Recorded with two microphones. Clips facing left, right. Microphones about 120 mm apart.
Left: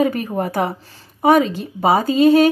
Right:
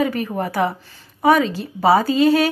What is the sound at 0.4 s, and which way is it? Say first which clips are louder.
Speech: even; 30° left (ahead or behind).